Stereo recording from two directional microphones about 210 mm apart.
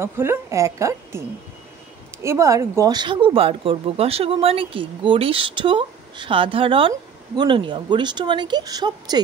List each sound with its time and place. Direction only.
0.0 s a woman's voice: 10° right (ahead or behind)
2.2 s speech: 15° right (ahead or behind)